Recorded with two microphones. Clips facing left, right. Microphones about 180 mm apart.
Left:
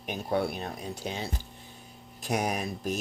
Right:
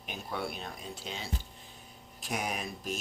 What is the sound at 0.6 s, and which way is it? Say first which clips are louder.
Speech: left 6 dB; 45° left (ahead or behind).